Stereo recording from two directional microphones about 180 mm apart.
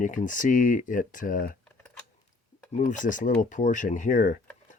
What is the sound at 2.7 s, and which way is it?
Speech, 45° left (ahead or behind).